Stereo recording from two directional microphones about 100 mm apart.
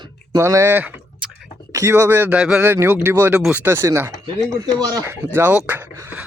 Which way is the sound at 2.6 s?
20° right (ahead or behind).